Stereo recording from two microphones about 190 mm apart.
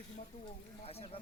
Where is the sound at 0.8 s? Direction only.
30° left (ahead or behind).